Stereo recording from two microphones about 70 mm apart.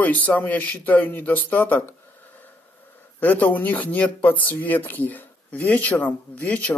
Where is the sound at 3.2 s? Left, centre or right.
Left.